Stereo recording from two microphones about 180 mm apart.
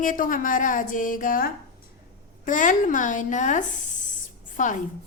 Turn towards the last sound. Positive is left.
turn(degrees=45)  # may be behind; listen again after turning